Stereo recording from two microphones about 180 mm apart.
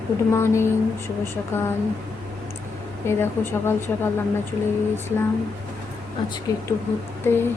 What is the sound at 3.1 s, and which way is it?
Speech, 15° left (ahead or behind).